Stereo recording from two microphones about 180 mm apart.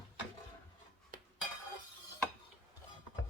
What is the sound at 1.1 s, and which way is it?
Dishes, 50° right (ahead or behind).